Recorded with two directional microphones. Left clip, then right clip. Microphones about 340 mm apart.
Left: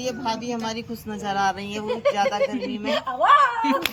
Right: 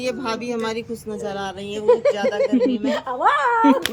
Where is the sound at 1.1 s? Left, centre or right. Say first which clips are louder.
Left 7 dB; centre.